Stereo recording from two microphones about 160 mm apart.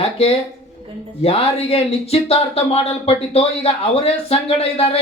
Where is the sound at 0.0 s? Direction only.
40° left (ahead or behind).